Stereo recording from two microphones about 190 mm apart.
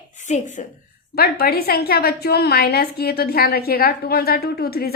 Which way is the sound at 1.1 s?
55° left (ahead or behind).